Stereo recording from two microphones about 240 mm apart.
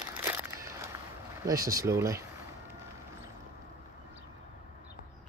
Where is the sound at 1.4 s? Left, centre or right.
Centre.